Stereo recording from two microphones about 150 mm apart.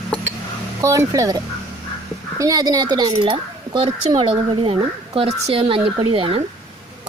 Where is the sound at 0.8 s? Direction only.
20° right (ahead or behind).